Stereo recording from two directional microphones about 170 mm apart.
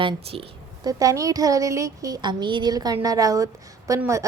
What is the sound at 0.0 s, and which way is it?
Speech, 30° right (ahead or behind).